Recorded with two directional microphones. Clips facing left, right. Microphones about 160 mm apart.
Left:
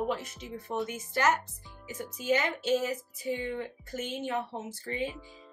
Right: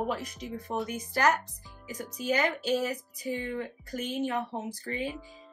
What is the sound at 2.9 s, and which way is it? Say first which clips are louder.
Music: left 1 dB; 25° left (ahead or behind).